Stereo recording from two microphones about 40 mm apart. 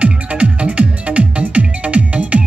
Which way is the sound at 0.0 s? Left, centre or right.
Right.